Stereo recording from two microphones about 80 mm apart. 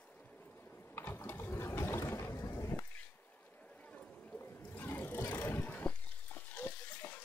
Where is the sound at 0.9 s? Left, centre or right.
Left.